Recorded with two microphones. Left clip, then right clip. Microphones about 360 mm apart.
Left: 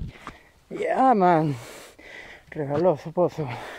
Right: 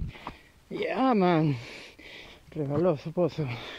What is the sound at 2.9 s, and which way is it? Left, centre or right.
Speech, centre.